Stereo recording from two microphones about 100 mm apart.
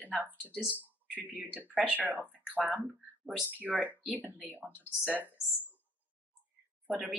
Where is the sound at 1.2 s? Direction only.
15° right (ahead or behind).